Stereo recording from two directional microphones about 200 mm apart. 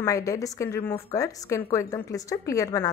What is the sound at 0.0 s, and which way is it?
A woman's voice, 15° left (ahead or behind).